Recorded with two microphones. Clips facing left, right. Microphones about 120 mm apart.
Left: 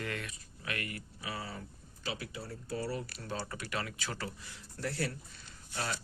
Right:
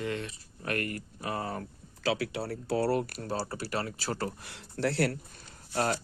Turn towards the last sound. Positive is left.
turn(degrees=-50)  # may be behind; listen again after turning